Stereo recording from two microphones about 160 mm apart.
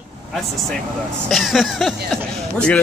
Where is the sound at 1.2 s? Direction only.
Centre (ahead or behind).